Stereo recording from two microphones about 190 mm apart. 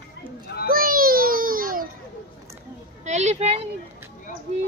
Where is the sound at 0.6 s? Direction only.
50° right (ahead or behind).